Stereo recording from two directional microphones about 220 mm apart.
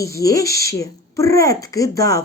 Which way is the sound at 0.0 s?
15° left (ahead or behind).